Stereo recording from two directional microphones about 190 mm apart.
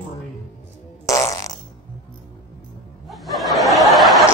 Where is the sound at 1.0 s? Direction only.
15° left (ahead or behind).